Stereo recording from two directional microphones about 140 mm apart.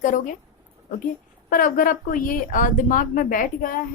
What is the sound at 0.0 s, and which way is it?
Speech, 70° left (ahead or behind).